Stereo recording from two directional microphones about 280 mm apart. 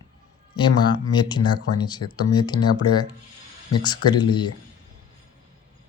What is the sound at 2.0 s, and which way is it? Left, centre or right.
Speech, left.